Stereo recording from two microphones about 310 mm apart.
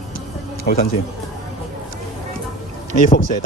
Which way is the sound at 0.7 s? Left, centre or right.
Left.